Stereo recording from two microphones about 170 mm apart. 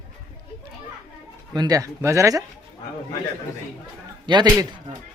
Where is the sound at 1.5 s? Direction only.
20° right (ahead or behind).